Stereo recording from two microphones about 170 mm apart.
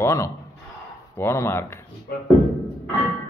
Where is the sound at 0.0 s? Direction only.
15° left (ahead or behind).